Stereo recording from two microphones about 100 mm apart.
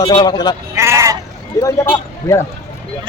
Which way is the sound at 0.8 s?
25° right (ahead or behind).